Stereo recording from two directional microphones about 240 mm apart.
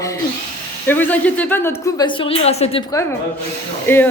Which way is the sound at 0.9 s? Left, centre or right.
Centre.